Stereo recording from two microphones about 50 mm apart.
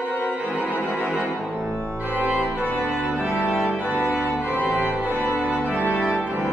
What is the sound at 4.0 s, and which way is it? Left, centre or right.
Organ, left.